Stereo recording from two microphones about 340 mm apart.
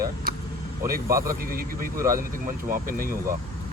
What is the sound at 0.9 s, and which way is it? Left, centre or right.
Speech, right.